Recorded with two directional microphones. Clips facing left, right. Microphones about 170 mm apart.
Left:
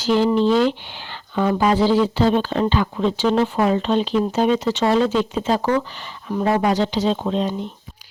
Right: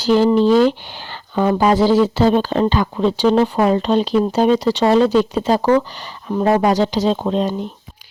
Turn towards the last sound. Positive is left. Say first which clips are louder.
# right 3 dB
turn(degrees=-40)  # may be behind; listen again after turning